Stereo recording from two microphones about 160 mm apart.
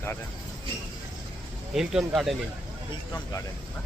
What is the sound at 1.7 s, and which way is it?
Speech, 5° right (ahead or behind).